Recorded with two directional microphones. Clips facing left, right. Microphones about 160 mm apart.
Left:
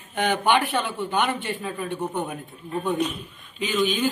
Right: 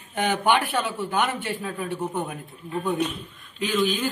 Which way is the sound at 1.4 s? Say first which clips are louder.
Even; 5° right (ahead or behind).